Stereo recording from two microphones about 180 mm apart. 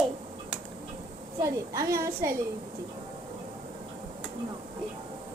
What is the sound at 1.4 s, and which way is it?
Speech, 15° right (ahead or behind).